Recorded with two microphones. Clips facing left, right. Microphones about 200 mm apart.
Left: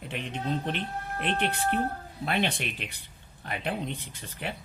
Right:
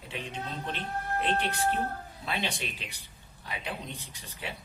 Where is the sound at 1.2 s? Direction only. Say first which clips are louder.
Left 1 dB; 60° left (ahead or behind).